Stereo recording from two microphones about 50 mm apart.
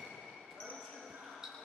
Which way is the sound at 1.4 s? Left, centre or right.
Centre.